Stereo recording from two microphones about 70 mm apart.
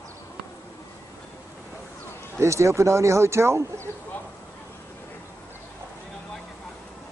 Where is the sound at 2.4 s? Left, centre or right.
Right.